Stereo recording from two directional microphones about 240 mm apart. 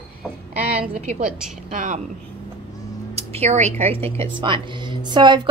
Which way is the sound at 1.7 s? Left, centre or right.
Right.